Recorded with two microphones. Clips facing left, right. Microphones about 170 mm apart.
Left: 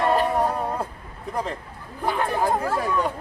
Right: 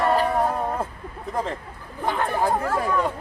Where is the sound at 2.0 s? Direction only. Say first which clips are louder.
Even; 10° left (ahead or behind).